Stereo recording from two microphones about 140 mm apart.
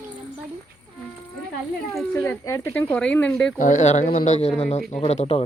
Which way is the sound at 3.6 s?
60° left (ahead or behind).